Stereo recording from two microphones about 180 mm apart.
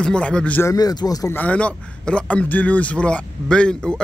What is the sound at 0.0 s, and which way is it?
A man's voice, 5° left (ahead or behind).